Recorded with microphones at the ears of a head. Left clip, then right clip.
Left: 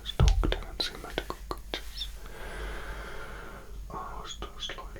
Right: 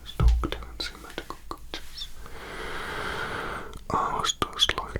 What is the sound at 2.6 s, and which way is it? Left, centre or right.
Whispering, right.